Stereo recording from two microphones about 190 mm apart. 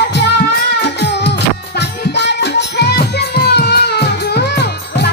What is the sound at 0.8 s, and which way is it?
Music, 65° left (ahead or behind).